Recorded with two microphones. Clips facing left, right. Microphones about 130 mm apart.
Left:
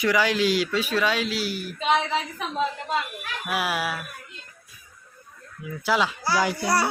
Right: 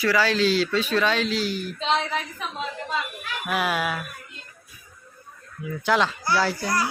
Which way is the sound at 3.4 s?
5° left (ahead or behind).